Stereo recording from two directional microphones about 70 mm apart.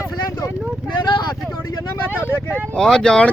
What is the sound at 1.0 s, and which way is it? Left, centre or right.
Vehicle, left.